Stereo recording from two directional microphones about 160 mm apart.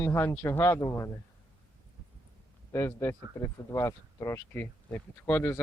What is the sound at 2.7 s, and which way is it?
Speech, 15° left (ahead or behind).